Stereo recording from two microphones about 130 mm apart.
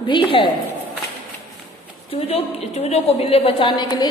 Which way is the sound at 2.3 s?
55° left (ahead or behind).